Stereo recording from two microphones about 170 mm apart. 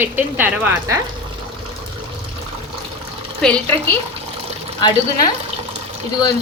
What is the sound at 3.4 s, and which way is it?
Speech, 10° left (ahead or behind).